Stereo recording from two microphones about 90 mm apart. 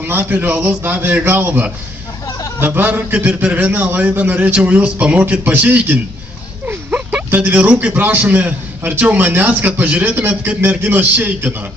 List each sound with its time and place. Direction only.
0.0 s a man's voice: 25° right (ahead or behind)